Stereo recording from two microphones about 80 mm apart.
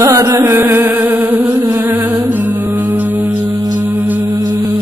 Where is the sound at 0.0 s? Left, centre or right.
Right.